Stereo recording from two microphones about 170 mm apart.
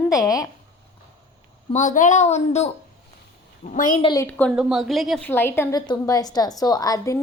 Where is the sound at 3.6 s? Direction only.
50° left (ahead or behind).